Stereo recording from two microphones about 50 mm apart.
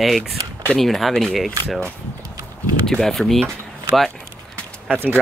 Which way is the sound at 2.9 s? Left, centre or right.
Centre.